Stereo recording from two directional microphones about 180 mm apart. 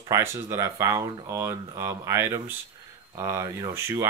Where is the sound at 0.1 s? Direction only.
15° right (ahead or behind).